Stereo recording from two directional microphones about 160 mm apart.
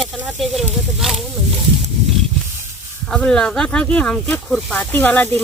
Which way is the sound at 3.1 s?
5° left (ahead or behind).